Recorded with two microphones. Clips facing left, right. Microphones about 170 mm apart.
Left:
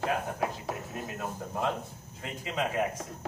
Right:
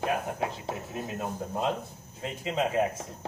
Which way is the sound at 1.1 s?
20° right (ahead or behind).